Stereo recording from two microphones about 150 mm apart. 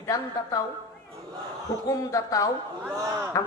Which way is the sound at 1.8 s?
20° left (ahead or behind).